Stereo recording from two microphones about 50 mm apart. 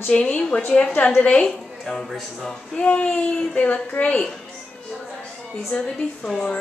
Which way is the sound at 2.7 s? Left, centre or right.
Left.